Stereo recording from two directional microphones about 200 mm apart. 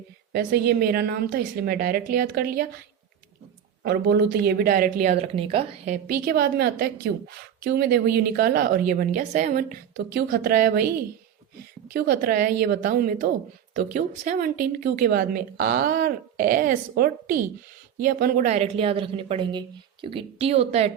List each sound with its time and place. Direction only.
0.3 s a woman's voice: 50° right (ahead or behind)
3.8 s a woman's voice: 55° right (ahead or behind)
5.1 s a woman's voice: 30° right (ahead or behind); by 10.9 s 45° right (ahead or behind)
11.9 s a woman's voice: 50° right (ahead or behind); by 20.9 s 30° right (ahead or behind)